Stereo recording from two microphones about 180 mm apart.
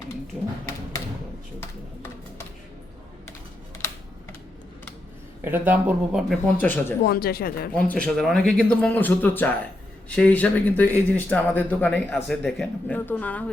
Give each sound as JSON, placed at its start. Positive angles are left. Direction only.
{"t": 5.4, "sound": "speech", "side_deg": -10}
{"t": 6.6, "sound": "speech", "side_deg": 10}
{"t": 7.0, "sound": "speech", "side_deg": 60}
{"t": 7.8, "sound": "speech", "side_deg": 5}